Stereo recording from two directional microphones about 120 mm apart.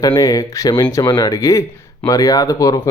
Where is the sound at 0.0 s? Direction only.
30° left (ahead or behind).